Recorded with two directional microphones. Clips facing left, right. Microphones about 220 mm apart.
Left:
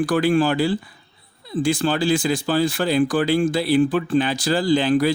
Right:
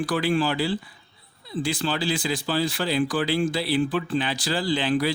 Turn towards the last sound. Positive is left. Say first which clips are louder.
# left 6 dB
turn(degrees=45)  # may be behind; listen again after turning